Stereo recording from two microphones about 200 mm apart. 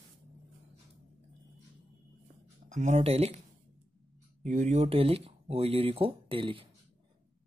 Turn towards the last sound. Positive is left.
turn(degrees=-25)  # may be behind; listen again after turning